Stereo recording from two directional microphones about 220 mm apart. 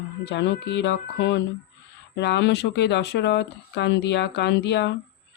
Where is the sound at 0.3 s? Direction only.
50° left (ahead or behind).